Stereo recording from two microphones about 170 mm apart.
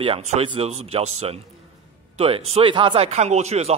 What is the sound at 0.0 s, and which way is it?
A man's voice, 35° right (ahead or behind).